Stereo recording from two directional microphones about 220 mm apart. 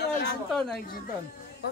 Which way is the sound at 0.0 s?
50° left (ahead or behind).